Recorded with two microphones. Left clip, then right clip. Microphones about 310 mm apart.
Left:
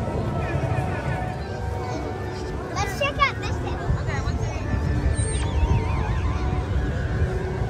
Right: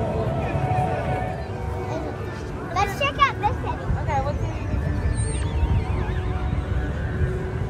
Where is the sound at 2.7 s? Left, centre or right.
Right.